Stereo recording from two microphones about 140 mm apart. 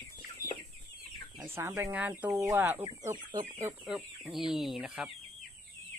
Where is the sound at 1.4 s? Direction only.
20° right (ahead or behind).